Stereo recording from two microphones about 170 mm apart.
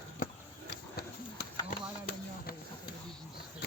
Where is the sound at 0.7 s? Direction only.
65° left (ahead or behind).